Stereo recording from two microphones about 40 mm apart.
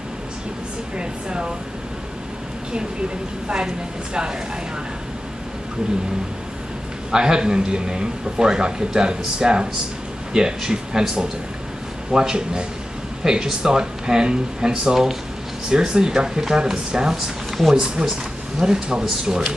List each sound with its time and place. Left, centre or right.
0.9 s a sound: right
3.4 s a man's voice: right
7.1 s a man's voice: centre